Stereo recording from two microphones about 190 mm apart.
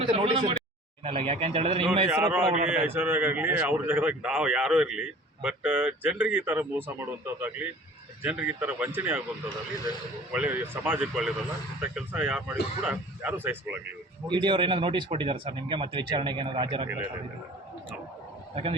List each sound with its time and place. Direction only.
0.0 s speech: 25° right (ahead or behind)
2.1 s a man's voice: 5° right (ahead or behind)
10.3 s a man's voice: 10° right (ahead or behind)
14.3 s speech: 25° right (ahead or behind)